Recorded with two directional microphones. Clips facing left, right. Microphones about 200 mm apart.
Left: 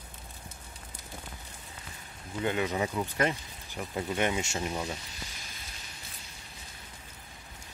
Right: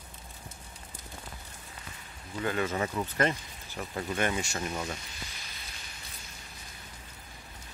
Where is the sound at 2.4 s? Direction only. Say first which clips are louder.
Left 1 dB; 15° left (ahead or behind).